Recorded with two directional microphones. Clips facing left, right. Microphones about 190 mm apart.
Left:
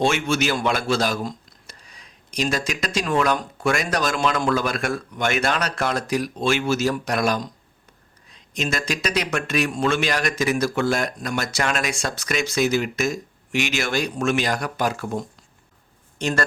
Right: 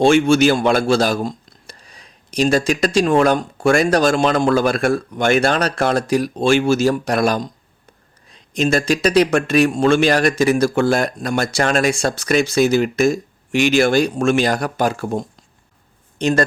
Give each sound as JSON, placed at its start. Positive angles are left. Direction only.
{"t": 0.0, "sound": "speech", "side_deg": -30}
{"t": 3.1, "sound": "speech", "side_deg": -45}
{"t": 3.3, "sound": "speech", "side_deg": -30}
{"t": 16.1, "sound": "speech", "side_deg": -20}